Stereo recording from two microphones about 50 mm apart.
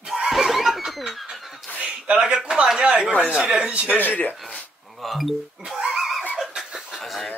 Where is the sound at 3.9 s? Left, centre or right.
Left.